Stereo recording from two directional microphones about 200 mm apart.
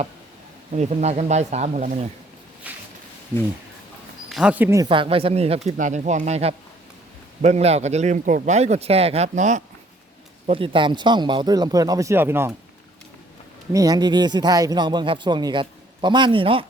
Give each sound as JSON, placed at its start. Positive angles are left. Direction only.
{"t": 0.7, "sound": "speech", "side_deg": -35}
{"t": 2.7, "sound": "a sound", "side_deg": -5}
{"t": 4.3, "sound": "speech", "side_deg": -5}
{"t": 4.9, "sound": "a man's voice", "side_deg": -25}
{"t": 10.4, "sound": "a man's voice", "side_deg": -25}
{"t": 13.7, "sound": "a man's voice", "side_deg": -20}